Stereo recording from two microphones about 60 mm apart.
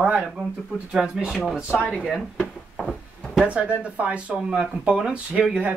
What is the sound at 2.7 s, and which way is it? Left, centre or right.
Music, centre.